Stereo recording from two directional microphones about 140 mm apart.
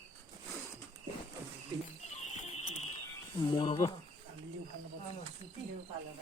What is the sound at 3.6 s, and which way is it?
Speech, 35° left (ahead or behind).